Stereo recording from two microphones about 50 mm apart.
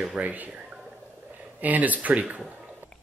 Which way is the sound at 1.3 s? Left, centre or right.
Right.